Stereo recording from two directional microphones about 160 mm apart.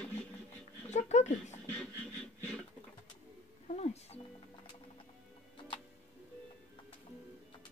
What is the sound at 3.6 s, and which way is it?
Music, 45° left (ahead or behind).